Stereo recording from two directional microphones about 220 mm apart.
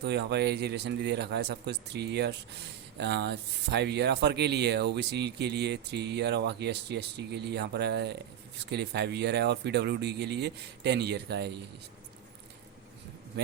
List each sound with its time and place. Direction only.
0.0 s speech: 50° right (ahead or behind)